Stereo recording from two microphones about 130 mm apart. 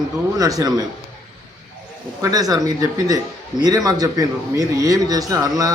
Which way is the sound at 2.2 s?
30° right (ahead or behind).